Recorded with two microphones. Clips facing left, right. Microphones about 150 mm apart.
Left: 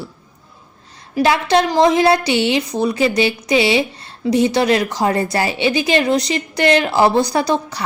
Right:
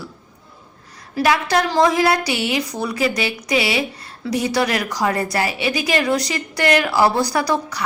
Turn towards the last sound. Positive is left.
turn(degrees=25)  # may be behind; listen again after turning